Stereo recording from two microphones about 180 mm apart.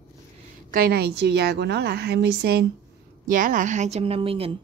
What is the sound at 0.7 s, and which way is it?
A woman's voice, 55° right (ahead or behind).